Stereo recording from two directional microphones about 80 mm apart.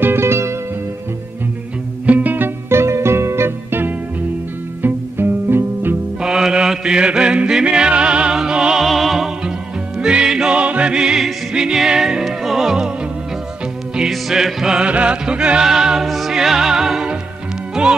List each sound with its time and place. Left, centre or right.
0.0 s music: right
2.0 s music: right
6.2 s music: centre
13.9 s music: centre